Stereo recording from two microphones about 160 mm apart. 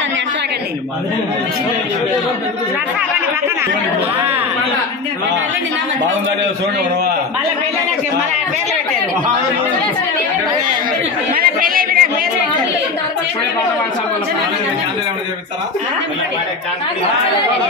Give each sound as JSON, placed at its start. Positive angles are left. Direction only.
{"t": 11.3, "sound": "speech", "side_deg": -65}